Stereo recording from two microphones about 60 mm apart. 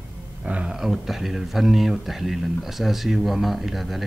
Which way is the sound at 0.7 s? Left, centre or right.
Centre.